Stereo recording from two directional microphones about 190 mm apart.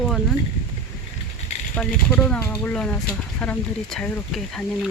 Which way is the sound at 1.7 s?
5° left (ahead or behind).